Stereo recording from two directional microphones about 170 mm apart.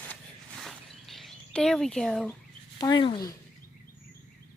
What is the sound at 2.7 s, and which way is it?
Speech, 25° left (ahead or behind).